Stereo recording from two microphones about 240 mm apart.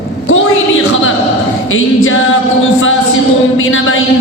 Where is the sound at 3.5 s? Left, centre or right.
Left.